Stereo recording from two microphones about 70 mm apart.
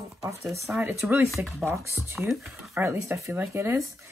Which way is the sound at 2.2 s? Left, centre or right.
Centre.